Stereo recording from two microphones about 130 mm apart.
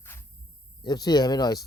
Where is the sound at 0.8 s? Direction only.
30° left (ahead or behind).